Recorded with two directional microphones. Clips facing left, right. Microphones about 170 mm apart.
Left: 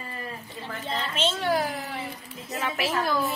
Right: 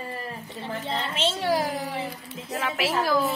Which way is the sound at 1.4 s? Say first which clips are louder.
Right 1 dB; 30° right (ahead or behind).